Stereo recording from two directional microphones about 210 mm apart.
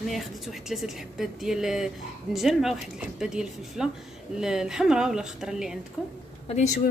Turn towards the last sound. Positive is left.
turn(degrees=35)  # may be behind; listen again after turning